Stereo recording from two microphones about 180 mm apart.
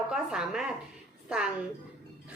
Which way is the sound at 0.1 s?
5° right (ahead or behind).